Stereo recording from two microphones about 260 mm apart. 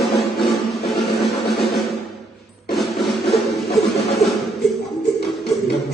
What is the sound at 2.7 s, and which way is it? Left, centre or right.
Music, centre.